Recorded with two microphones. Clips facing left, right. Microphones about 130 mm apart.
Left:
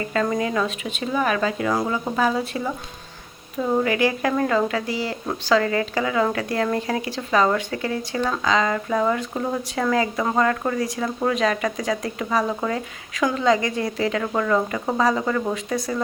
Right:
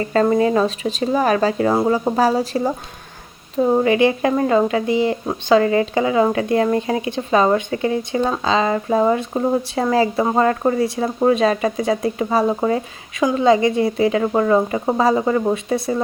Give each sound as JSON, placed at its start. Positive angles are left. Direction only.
{"t": 0.0, "sound": "speech", "side_deg": -35}